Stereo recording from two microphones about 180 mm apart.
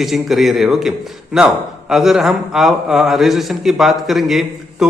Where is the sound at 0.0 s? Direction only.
Centre (ahead or behind).